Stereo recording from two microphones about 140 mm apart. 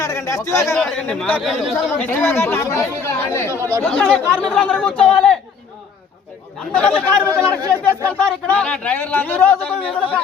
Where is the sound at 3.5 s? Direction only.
20° right (ahead or behind).